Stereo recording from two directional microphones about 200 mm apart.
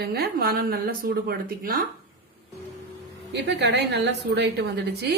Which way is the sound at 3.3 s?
60° right (ahead or behind).